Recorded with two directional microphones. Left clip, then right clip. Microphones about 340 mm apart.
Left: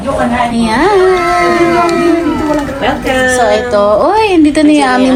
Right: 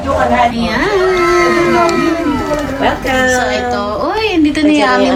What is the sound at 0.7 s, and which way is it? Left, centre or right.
A woman's voice, centre.